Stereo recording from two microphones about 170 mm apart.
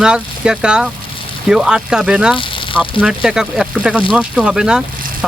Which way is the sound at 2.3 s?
30° left (ahead or behind).